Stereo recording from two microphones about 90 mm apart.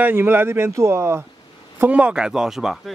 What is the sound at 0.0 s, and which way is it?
Speech, 25° right (ahead or behind).